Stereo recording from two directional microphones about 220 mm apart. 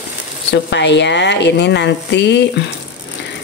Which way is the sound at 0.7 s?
50° left (ahead or behind).